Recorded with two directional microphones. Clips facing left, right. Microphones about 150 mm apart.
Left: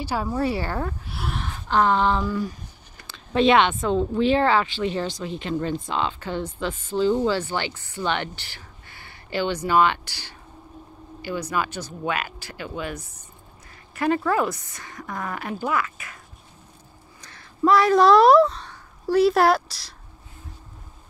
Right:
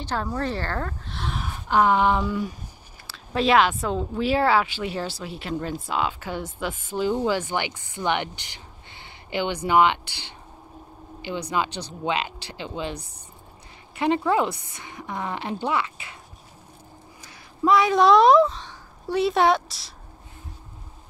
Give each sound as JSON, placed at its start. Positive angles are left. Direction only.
{"t": 0.0, "sound": "a woman's voice", "side_deg": 10}
{"t": 1.4, "sound": "a sound", "side_deg": -10}
{"t": 2.2, "sound": "a woman's voice", "side_deg": 0}
{"t": 17.2, "sound": "speech", "side_deg": -5}